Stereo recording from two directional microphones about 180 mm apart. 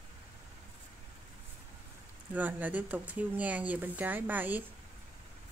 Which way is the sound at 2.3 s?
10° right (ahead or behind).